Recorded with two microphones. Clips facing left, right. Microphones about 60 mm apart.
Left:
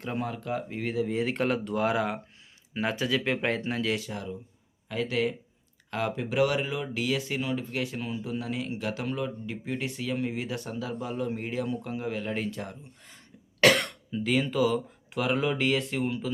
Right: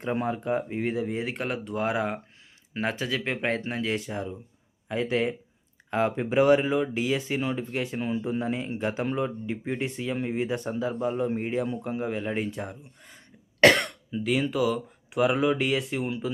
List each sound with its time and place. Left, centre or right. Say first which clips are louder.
0.0 s speech: right 5 dB; right
2.7 s speech: left 1 dB; right; by 13.1 s centre
13.7 s speech: right 1 dB; centre